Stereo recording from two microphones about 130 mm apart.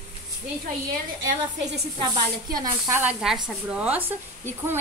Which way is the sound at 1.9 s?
35° right (ahead or behind).